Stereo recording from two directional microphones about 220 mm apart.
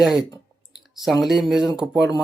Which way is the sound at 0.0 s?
Centre (ahead or behind).